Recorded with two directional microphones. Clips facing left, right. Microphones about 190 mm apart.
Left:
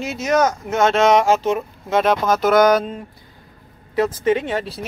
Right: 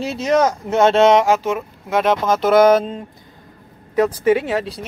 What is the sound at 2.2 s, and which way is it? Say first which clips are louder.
Speech: right 3 dB; 25° right (ahead or behind).